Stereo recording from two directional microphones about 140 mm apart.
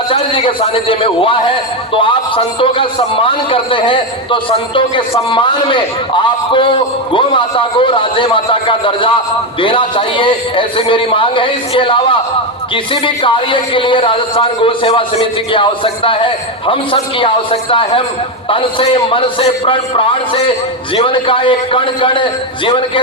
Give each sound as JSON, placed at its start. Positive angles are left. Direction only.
{"t": 0.1, "sound": "a man's voice", "side_deg": 40}